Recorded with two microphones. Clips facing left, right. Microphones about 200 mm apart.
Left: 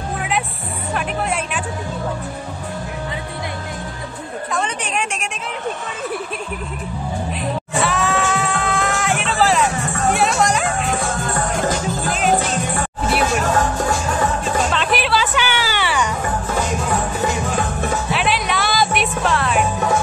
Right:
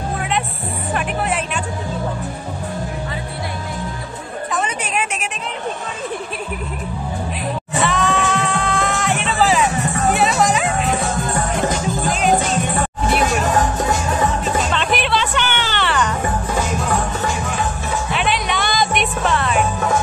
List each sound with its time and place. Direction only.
0.9 s music: centre (ahead or behind)
4.5 s a sound: 5° right (ahead or behind)
7.7 s music: centre (ahead or behind)
12.1 s music: centre (ahead or behind)
13.5 s music: 20° right (ahead or behind)
14.7 s music: centre (ahead or behind)
18.1 s music: centre (ahead or behind)